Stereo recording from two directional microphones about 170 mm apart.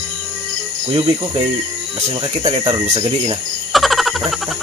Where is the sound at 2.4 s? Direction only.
25° right (ahead or behind).